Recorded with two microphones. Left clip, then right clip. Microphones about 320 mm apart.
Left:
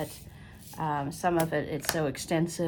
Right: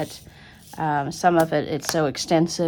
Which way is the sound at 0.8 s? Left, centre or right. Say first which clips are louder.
Right 8 dB; right.